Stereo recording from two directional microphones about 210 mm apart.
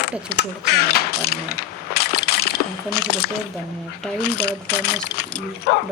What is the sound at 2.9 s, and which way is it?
Speech, 50° left (ahead or behind).